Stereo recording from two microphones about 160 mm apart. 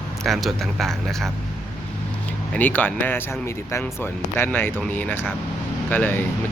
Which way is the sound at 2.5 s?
10° left (ahead or behind).